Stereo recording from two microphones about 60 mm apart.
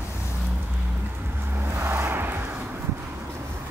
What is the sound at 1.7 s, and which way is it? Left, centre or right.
Vehicle, right.